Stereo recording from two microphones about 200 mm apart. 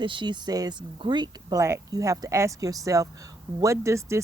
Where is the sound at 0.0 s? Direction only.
25° right (ahead or behind).